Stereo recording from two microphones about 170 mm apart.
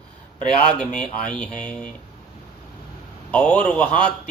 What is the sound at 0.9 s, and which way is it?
Speech, 5° left (ahead or behind).